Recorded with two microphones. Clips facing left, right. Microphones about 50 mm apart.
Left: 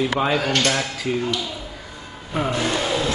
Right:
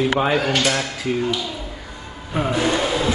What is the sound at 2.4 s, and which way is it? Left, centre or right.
Speech, centre.